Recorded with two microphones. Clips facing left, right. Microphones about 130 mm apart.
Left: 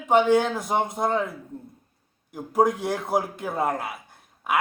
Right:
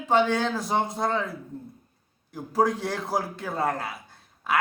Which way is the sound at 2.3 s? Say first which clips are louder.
Left 2 dB; 20° left (ahead or behind).